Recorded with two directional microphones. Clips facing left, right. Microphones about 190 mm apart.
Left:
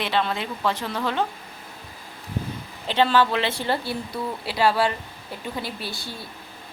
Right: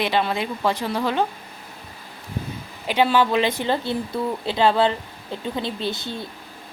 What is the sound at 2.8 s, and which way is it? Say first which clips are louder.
A woman's voice: right 1 dB; 10° right (ahead or behind).